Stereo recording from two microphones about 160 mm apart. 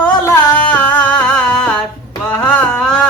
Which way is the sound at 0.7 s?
10° left (ahead or behind).